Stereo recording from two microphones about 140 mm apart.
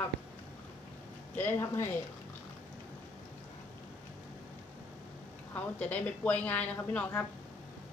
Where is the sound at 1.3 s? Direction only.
15° left (ahead or behind).